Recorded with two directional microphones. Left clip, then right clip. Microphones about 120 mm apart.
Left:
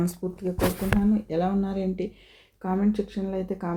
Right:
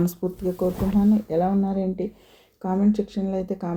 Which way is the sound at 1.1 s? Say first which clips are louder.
Right 4 dB; 30° right (ahead or behind).